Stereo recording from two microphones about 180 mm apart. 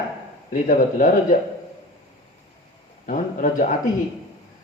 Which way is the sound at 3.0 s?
45° left (ahead or behind).